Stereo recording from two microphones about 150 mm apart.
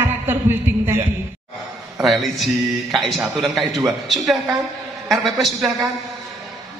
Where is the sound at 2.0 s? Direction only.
Centre (ahead or behind).